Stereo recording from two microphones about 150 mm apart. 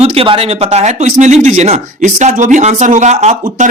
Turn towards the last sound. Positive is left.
turn(degrees=-50)  # may be behind; listen again after turning